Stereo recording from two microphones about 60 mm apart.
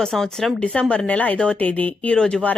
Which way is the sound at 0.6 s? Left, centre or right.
Centre.